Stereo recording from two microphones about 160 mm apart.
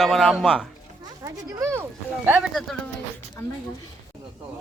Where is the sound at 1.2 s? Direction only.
20° right (ahead or behind).